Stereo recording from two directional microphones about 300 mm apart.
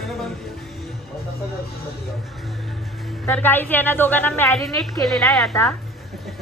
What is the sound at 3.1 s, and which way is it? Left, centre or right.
A woman's voice, centre.